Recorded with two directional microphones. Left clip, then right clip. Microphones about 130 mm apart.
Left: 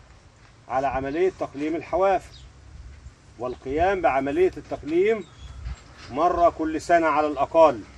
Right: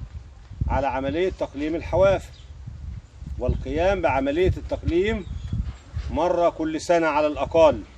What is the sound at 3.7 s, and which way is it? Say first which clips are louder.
Speech: left 1 dB; 90° right.